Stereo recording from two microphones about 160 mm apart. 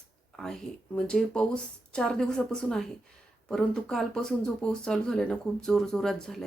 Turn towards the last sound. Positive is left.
turn(degrees=0)  # may be behind; listen again after turning